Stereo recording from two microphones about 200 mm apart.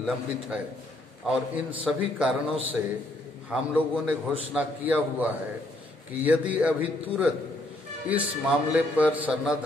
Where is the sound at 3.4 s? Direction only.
5° right (ahead or behind).